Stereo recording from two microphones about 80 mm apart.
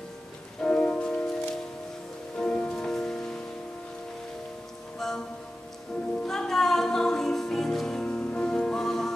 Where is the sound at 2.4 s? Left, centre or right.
Centre.